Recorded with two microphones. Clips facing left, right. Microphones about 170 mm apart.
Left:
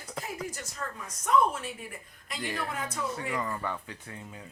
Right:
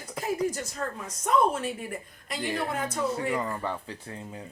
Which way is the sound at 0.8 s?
40° right (ahead or behind).